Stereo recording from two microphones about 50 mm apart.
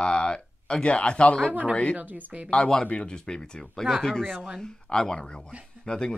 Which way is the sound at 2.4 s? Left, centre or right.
Left.